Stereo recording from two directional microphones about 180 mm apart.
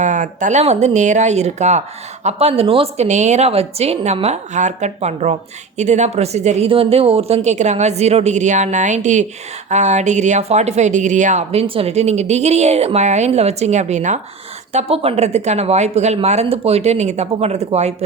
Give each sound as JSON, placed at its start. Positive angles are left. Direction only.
{"t": 0.0, "sound": "a woman's voice", "side_deg": -45}